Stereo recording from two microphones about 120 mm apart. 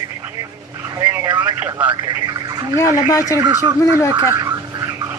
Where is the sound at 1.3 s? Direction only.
35° right (ahead or behind).